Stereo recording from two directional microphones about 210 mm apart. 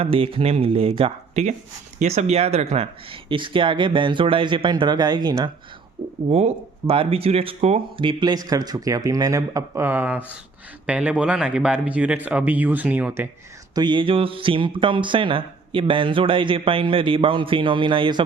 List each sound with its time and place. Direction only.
0.0 s speech: 25° right (ahead or behind)
6.2 s speech: 30° right (ahead or behind); by 13.2 s 10° right (ahead or behind)
13.7 s speech: 20° right (ahead or behind)